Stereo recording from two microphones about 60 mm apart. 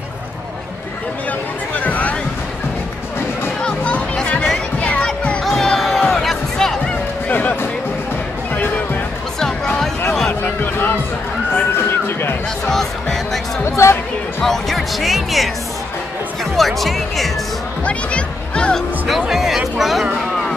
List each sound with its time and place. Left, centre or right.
1.8 s a sound: left
3.6 s music: centre
5.4 s music: centre
7.2 s music: left
8.5 s music: left
10.4 s music: left
12.6 s music: centre
13.7 s music: left
14.4 s music: centre
16.5 s speech: centre
17.8 s music: centre
19.0 s music: centre